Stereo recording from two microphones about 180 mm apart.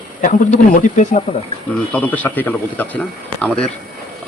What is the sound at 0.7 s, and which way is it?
Speech, 40° left (ahead or behind).